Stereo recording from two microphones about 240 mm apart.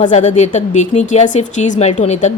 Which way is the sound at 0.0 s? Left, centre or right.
Left.